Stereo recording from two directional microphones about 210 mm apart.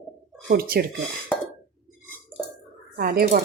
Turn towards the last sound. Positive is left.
turn(degrees=-45)  # may be behind; listen again after turning